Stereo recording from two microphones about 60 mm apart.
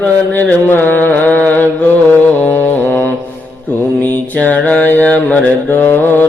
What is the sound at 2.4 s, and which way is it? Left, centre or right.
Music, left.